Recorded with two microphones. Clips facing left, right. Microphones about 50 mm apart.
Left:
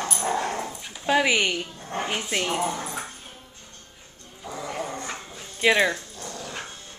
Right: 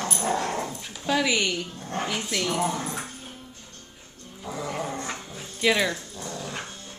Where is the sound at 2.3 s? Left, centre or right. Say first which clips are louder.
Left 1 dB; left.